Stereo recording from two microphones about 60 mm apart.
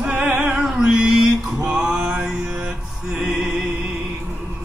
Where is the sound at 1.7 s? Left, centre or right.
Centre.